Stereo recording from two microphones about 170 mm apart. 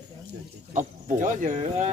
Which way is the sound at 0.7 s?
50° right (ahead or behind).